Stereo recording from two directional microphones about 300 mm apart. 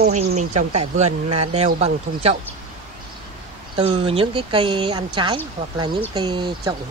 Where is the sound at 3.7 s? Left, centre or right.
Centre.